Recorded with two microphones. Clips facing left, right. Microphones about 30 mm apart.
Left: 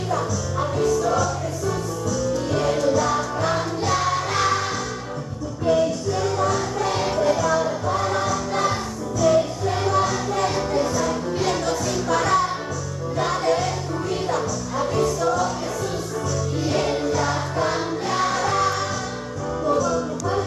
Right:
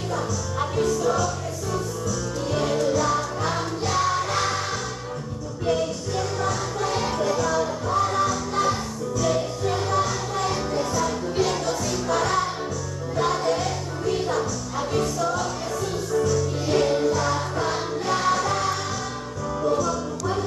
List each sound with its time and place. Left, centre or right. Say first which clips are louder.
2.5 s music: left 1 dB; centre
6.4 s music: left 3 dB; centre
10.0 s music: left 3 dB; left
17.2 s music: left 2 dB; centre